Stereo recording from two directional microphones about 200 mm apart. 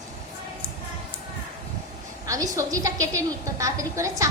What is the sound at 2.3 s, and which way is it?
A woman's voice, 15° right (ahead or behind).